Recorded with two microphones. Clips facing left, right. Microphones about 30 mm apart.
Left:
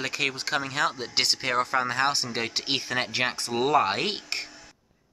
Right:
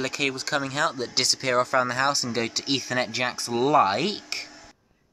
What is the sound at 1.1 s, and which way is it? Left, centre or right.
Speech, left.